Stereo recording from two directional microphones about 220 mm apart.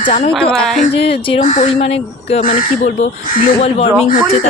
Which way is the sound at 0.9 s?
25° left (ahead or behind).